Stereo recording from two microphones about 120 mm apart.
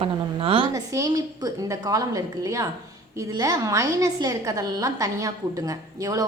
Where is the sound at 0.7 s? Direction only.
30° right (ahead or behind).